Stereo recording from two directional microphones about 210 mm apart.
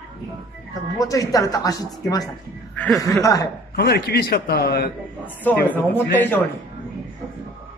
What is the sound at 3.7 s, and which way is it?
A man's voice, 45° left (ahead or behind).